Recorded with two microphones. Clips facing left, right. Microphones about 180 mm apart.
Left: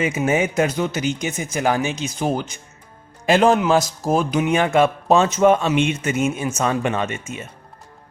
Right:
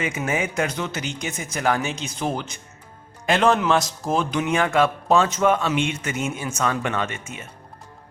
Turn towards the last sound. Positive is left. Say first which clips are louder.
# left 3 dB
turn(degrees=20)  # may be behind; listen again after turning